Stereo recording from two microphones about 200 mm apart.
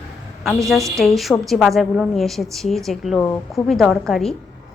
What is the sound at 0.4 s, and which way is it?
A woman's voice, centre (ahead or behind).